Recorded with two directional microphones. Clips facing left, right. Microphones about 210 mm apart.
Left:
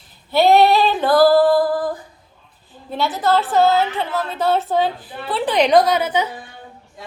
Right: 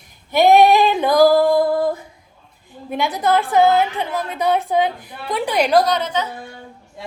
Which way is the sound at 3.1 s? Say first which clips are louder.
Right 1 dB; 15° right (ahead or behind).